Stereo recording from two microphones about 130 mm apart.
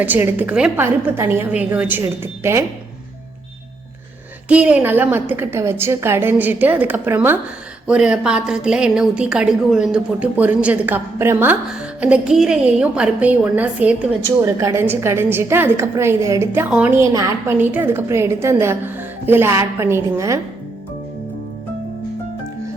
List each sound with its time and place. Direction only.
0.0 s a woman's voice: 15° right (ahead or behind)
4.4 s a woman's voice: 10° right (ahead or behind)
14.4 s a woman's voice: 25° right (ahead or behind)
17.0 s a woman's voice: 25° right (ahead or behind)